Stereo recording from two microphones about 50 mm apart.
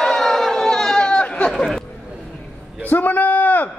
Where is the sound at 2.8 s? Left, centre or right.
Left.